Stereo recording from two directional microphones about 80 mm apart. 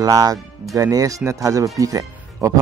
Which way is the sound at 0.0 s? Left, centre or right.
Right.